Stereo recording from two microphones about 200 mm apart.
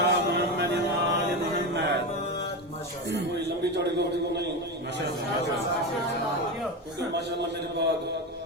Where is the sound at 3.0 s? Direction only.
60° right (ahead or behind).